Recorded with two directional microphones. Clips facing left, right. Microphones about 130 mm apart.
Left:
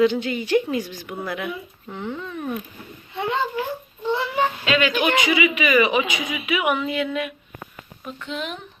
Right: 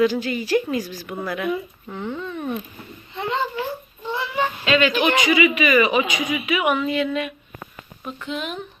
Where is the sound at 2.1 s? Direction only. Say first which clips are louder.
Right 2 dB; 15° right (ahead or behind).